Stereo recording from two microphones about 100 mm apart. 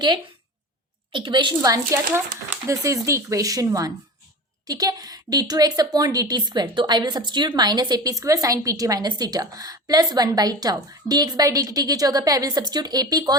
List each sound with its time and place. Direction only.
1.1 s a woman's voice: 55° right (ahead or behind)
1.6 s a woman's voice: 30° right (ahead or behind)